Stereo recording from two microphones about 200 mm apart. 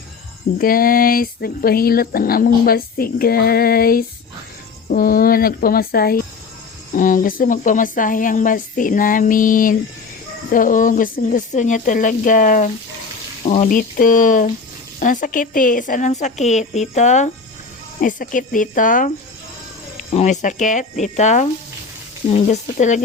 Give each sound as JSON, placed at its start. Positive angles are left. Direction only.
{"t": 0.6, "sound": "a woman's voice", "side_deg": 45}